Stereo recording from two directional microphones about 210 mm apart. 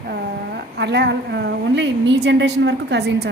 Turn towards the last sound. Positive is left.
turn(degrees=-55)  # may be behind; listen again after turning